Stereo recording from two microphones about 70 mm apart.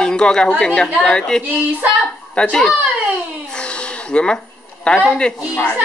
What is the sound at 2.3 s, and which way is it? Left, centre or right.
Speech, centre.